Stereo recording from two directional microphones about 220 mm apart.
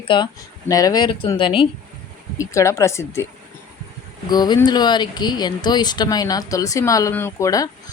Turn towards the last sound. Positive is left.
turn(degrees=15)  # may be behind; listen again after turning